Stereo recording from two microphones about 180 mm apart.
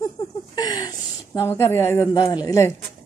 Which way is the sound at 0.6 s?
20° left (ahead or behind).